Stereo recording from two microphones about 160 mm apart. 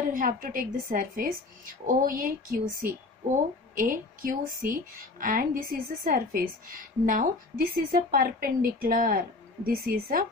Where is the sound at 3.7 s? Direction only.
60° right (ahead or behind).